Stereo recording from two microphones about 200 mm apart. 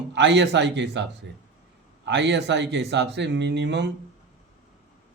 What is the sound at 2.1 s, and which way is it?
Speech, 60° right (ahead or behind).